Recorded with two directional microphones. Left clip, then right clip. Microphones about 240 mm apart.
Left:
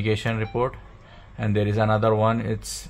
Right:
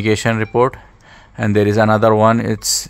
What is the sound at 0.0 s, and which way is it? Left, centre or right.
Speech, right.